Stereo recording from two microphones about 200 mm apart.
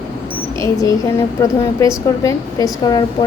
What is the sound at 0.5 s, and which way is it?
A woman's voice, 15° left (ahead or behind).